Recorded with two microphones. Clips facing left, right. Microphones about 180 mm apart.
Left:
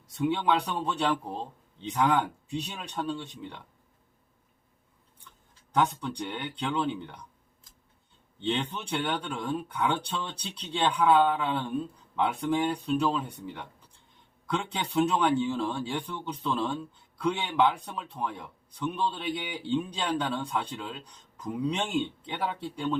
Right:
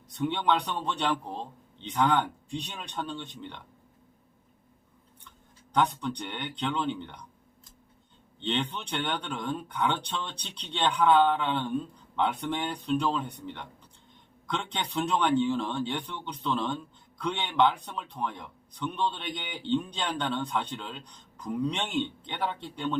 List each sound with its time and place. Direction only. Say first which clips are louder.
0.2 s speech: left 1 dB; 5° left (ahead or behind)
5.7 s speech: even; 5° left (ahead or behind)
8.4 s speech: left 1 dB; 5° left (ahead or behind)